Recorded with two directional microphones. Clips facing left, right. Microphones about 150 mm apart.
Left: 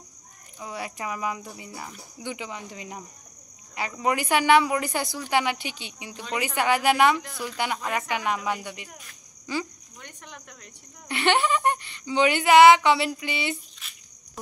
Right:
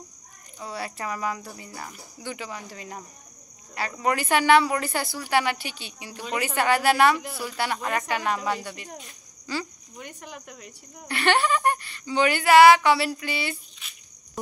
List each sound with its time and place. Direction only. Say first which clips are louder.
0.6 s speech: right 1 dB; 15° left (ahead or behind)
4.0 s speech: even; 15° left (ahead or behind)
7.2 s speech: even; 10° right (ahead or behind)
7.5 s speech: right 1 dB; 15° left (ahead or behind)
8.8 s speech: right 6 dB; 25° right (ahead or behind)
9.5 s speech: left 1 dB; 20° left (ahead or behind)
9.9 s speech: right 5 dB; 10° right (ahead or behind)
11.1 s speech: even; 20° left (ahead or behind)
13.8 s a sound: even; centre (ahead or behind)